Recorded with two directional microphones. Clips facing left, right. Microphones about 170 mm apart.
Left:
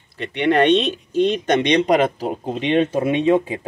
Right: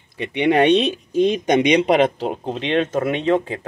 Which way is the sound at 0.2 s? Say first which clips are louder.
Right 1 dB; 15° right (ahead or behind).